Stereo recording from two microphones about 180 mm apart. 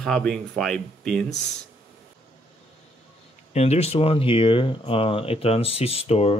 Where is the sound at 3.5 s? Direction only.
35° left (ahead or behind).